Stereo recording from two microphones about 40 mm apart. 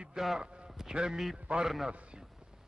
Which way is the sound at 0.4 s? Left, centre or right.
Right.